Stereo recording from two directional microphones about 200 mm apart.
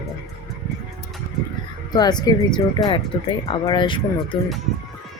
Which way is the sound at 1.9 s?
20° left (ahead or behind).